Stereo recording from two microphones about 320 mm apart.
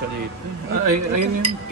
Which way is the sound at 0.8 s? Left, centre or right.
Right.